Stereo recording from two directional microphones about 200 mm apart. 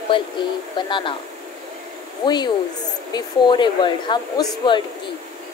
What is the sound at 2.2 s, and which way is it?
Speech, 20° left (ahead or behind).